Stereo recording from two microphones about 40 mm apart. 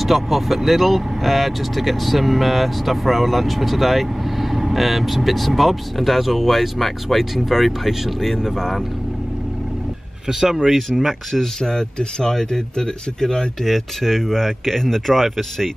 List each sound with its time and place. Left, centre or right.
0.0 s speech: centre
10.2 s speech: centre
11.3 s speech: centre
13.7 s speech: centre